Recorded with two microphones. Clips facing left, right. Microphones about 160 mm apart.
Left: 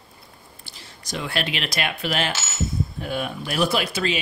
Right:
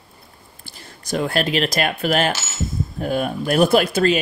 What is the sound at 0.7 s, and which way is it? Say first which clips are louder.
Speech: right 8 dB; 50° right (ahead or behind).